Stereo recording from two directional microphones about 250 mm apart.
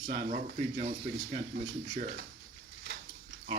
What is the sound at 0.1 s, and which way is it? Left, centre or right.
Speech, right.